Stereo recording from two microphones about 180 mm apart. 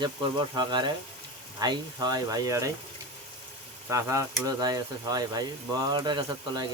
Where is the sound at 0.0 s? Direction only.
25° right (ahead or behind).